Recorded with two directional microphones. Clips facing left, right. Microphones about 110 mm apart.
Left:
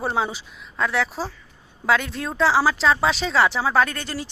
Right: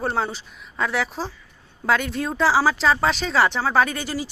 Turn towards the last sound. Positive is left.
turn(degrees=-5)  # may be behind; listen again after turning